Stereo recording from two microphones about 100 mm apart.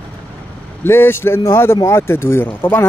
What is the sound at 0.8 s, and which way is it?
Speech, 25° left (ahead or behind).